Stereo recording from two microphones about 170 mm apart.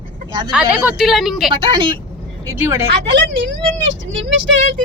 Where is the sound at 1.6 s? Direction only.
30° right (ahead or behind).